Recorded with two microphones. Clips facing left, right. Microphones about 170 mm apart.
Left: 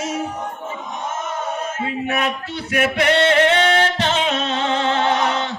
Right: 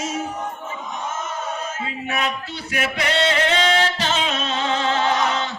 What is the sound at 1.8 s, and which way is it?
Male singing, 55° left (ahead or behind).